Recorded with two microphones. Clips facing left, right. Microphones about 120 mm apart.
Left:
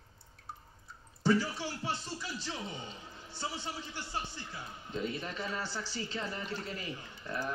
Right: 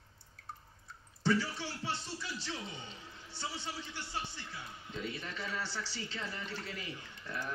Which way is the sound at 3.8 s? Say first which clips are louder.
Left 2 dB; 40° left (ahead or behind).